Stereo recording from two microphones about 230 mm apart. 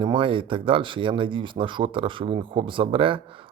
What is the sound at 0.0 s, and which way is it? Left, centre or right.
Speech, right.